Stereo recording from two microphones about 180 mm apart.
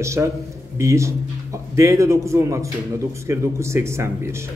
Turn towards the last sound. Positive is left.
turn(degrees=-15)  # may be behind; listen again after turning